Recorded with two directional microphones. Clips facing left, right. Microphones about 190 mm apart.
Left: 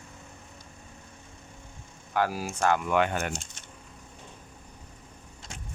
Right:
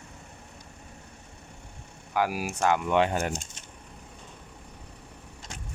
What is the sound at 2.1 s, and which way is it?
Speech, 10° right (ahead or behind).